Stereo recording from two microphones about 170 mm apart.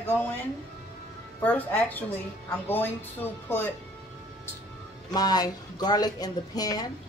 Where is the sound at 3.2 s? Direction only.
10° left (ahead or behind).